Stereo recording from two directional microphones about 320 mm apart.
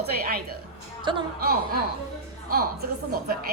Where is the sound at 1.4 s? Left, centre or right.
Right.